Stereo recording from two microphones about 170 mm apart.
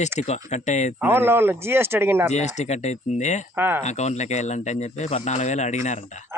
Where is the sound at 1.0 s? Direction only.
15° right (ahead or behind).